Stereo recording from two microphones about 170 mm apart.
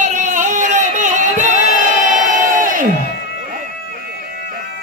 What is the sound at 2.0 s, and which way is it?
Crowd, 50° right (ahead or behind).